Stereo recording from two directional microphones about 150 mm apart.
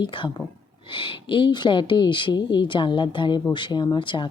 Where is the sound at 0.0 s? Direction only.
30° left (ahead or behind).